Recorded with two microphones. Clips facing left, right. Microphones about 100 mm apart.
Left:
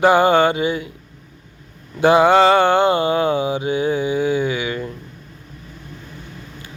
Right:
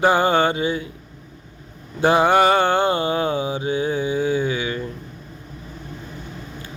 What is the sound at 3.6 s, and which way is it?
Male singing, 30° right (ahead or behind).